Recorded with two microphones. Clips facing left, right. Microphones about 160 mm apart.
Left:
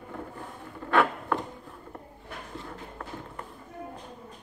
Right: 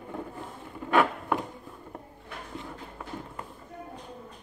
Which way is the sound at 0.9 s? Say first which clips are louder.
Even; 15° right (ahead or behind).